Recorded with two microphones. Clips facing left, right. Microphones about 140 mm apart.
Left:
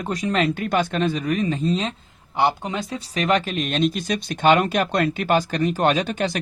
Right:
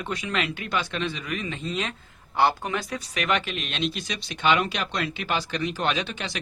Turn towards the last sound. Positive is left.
turn(degrees=45)  # may be behind; listen again after turning